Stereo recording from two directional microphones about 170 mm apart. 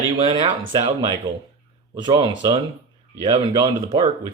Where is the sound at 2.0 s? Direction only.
25° right (ahead or behind).